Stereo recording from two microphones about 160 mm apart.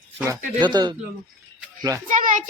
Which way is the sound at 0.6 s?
30° right (ahead or behind).